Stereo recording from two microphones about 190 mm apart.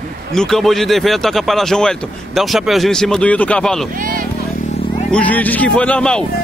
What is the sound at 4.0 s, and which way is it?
Speech, 45° right (ahead or behind).